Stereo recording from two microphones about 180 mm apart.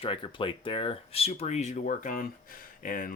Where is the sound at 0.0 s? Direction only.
30° left (ahead or behind).